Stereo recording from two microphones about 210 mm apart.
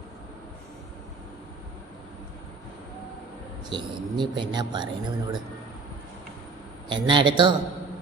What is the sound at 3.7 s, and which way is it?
Speech, 20° right (ahead or behind).